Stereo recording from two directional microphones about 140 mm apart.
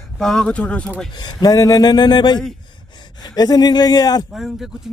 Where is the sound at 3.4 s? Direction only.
30° left (ahead or behind).